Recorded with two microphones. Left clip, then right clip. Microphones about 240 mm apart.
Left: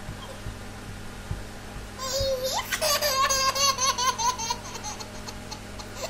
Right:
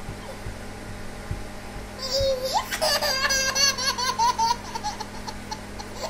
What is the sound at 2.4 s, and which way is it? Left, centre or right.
Baby laughter, centre.